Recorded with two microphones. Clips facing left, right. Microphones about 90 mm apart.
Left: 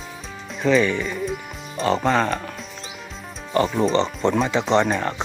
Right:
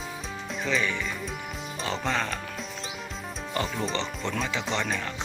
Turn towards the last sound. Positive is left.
turn(degrees=40)  # may be behind; listen again after turning